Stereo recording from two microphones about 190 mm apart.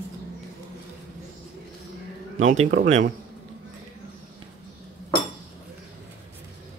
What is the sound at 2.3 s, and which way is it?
Speech, 40° right (ahead or behind).